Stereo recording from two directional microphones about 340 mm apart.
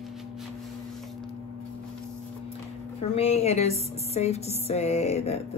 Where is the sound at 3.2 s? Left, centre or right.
Centre.